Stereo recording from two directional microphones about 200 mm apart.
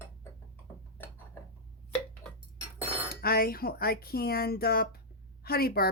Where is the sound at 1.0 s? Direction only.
10° left (ahead or behind).